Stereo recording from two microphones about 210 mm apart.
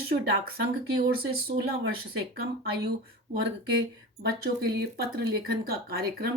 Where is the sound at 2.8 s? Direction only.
50° right (ahead or behind).